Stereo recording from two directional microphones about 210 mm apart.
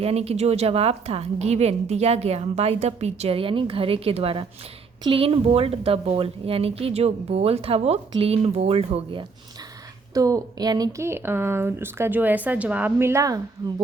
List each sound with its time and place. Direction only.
0.0 s a woman's voice: 30° right (ahead or behind)
10.2 s a woman's voice: 15° right (ahead or behind)